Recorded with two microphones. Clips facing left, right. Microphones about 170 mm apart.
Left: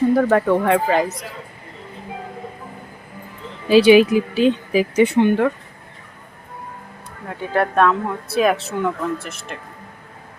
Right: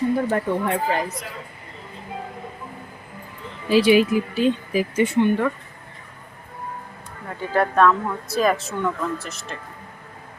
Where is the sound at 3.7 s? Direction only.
85° left.